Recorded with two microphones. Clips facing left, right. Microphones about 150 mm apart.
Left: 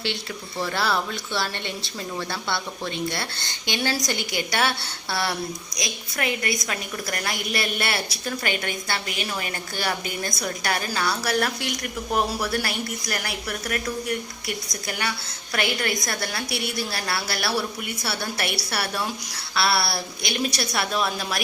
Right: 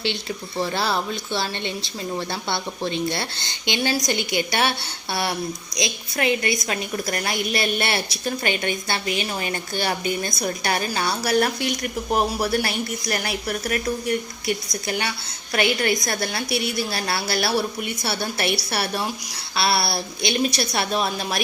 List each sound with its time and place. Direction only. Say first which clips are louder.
0.6 s a woman's voice: right 1 dB; 20° right (ahead or behind)